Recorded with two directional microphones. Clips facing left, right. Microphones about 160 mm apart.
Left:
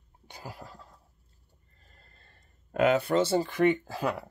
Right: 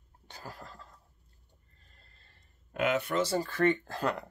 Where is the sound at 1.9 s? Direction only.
45° left (ahead or behind).